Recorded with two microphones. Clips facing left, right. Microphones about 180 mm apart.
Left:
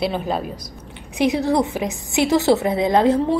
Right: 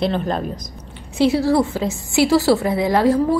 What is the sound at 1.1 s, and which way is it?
A woman's voice, 15° left (ahead or behind).